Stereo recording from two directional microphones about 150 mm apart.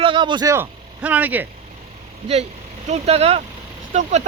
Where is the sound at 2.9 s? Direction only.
45° right (ahead or behind).